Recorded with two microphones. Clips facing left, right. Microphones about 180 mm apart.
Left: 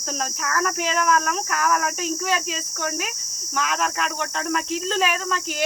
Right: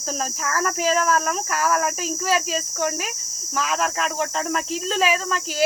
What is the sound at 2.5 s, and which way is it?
Insect, 35° right (ahead or behind).